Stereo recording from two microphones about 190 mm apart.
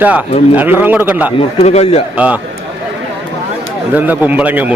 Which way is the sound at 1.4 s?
35° left (ahead or behind).